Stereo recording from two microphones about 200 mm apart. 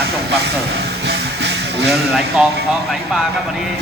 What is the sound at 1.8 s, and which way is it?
Music, centre (ahead or behind).